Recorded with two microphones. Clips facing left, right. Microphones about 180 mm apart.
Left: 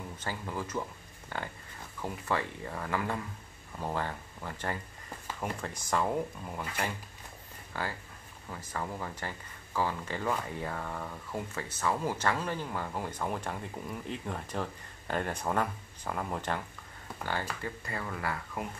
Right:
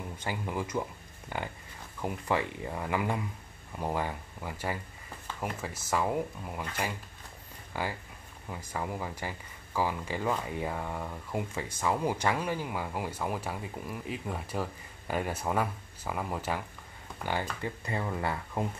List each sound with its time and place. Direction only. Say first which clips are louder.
0.2 s speech: right 3 dB; 15° right (ahead or behind)
7.7 s speech: right 2 dB; 15° right (ahead or behind)
17.3 s speech: right 3 dB; 20° right (ahead or behind)